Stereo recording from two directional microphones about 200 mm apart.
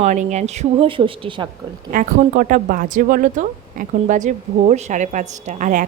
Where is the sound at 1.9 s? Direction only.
45° right (ahead or behind).